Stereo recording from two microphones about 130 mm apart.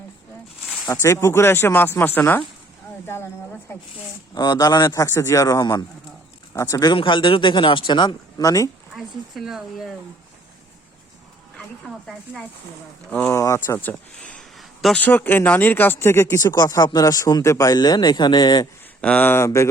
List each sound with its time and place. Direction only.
1.0 s speech: 20° left (ahead or behind)
4.4 s speech: 35° left (ahead or behind)
9.0 s speech: centre (ahead or behind)
12.0 s speech: centre (ahead or behind)
13.1 s speech: 15° left (ahead or behind)
13.4 s speech: 25° left (ahead or behind)
13.7 s speech: 10° left (ahead or behind)
15.0 s speech: 15° left (ahead or behind); by 18.7 s 35° left (ahead or behind)
19.0 s speech: 15° left (ahead or behind)